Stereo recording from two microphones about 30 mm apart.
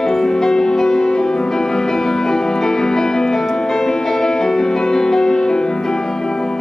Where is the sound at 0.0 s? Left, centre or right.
Centre.